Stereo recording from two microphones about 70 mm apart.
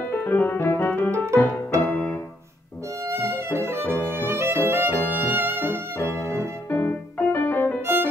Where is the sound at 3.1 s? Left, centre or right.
Right.